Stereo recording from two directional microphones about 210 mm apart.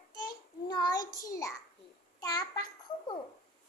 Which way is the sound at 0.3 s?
20° left (ahead or behind).